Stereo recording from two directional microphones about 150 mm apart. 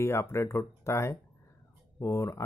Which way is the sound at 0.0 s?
15° left (ahead or behind).